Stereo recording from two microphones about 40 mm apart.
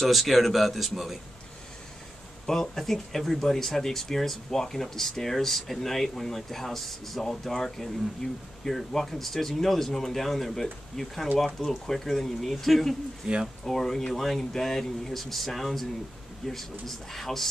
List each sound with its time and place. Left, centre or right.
0.1 s speech: centre
2.4 s speech: centre
13.2 s speech: centre
13.7 s speech: centre